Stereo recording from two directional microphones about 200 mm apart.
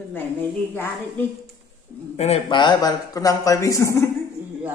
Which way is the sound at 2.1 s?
30° left (ahead or behind).